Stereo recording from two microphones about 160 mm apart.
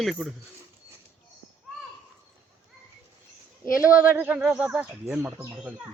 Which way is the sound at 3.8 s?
10° right (ahead or behind).